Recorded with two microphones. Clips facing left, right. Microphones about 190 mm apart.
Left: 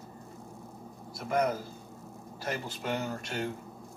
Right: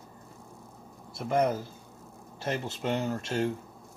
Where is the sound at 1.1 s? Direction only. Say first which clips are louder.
Right 3 dB; 25° right (ahead or behind).